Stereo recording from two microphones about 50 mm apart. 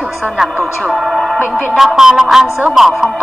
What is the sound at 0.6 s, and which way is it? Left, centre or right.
A woman's voice, centre.